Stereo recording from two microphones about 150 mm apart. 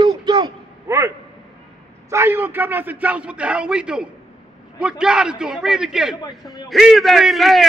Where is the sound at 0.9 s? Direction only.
20° right (ahead or behind).